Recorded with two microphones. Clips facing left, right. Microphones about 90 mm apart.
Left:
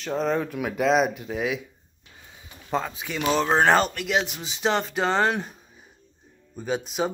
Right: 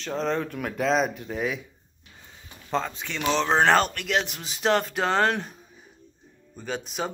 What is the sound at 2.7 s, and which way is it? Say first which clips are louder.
Speech: left 1 dB; 5° left (ahead or behind).